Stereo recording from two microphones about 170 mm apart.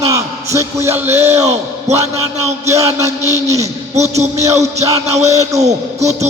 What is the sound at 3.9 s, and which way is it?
Speech, 40° right (ahead or behind).